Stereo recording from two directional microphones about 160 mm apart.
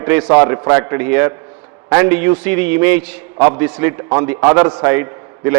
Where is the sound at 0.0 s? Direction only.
15° right (ahead or behind).